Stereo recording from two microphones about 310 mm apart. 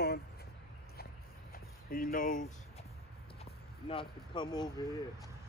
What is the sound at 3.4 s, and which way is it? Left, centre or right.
Speech, centre.